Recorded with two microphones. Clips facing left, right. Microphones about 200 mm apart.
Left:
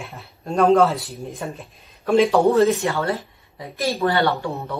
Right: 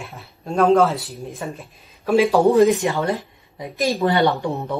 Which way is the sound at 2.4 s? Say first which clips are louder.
Right 2 dB; 15° right (ahead or behind).